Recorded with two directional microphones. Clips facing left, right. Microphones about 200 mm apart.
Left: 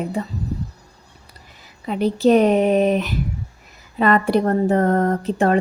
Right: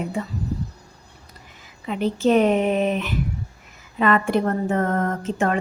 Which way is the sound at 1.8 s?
35° left (ahead or behind).